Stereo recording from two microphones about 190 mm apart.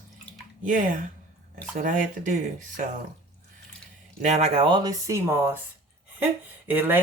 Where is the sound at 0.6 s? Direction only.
45° right (ahead or behind).